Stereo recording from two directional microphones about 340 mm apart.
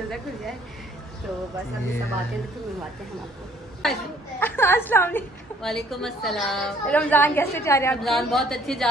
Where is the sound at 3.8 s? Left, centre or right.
Centre.